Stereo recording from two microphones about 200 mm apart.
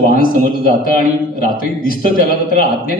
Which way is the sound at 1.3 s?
45° left (ahead or behind).